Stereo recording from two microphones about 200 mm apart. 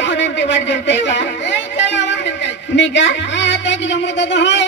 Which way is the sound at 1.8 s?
60° left (ahead or behind).